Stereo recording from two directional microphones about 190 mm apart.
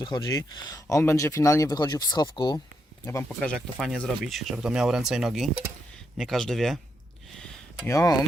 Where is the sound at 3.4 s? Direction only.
Centre (ahead or behind).